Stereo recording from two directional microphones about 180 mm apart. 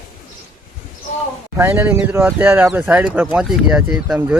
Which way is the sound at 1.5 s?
15° right (ahead or behind).